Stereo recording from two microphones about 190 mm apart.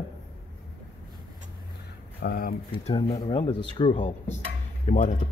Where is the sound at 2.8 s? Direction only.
25° left (ahead or behind).